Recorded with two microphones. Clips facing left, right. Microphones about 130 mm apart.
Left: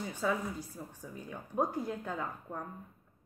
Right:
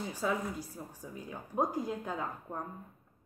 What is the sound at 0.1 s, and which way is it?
A woman's voice, 10° right (ahead or behind).